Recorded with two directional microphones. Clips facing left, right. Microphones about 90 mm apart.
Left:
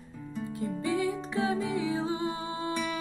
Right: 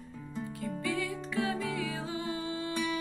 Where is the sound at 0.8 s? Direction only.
25° left (ahead or behind).